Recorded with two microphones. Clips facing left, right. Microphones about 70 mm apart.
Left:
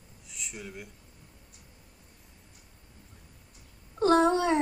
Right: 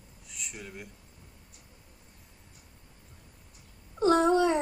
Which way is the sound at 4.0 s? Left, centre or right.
Left.